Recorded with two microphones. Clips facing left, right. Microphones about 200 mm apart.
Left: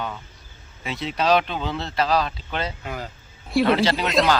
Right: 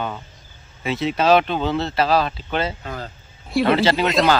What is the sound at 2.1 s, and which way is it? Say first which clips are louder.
Speech: right 3 dB; 60° right (ahead or behind).